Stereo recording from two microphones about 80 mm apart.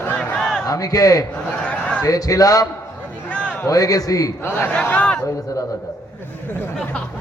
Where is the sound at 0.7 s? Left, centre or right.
Left.